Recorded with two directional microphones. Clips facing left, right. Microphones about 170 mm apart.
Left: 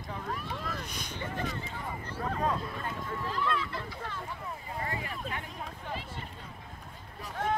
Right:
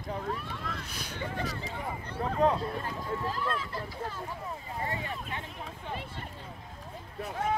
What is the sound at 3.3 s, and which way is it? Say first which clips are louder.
Speech: left 1 dB; 40° right (ahead or behind).